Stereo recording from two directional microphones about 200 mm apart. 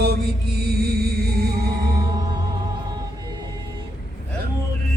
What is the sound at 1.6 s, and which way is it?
Music, 20° right (ahead or behind).